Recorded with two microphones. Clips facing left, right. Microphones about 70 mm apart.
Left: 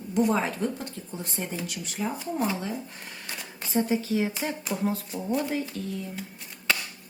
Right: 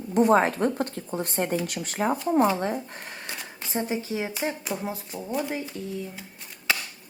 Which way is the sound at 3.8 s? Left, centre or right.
Right.